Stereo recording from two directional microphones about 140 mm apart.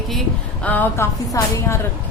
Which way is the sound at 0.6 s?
10° left (ahead or behind).